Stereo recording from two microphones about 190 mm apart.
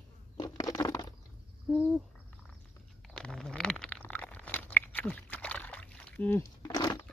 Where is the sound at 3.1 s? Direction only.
5° left (ahead or behind); by 7.1 s 20° left (ahead or behind).